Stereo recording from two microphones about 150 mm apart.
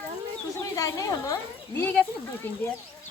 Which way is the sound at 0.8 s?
20° left (ahead or behind).